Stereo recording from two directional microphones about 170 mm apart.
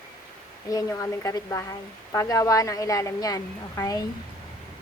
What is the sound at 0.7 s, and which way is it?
Speech, 20° left (ahead or behind).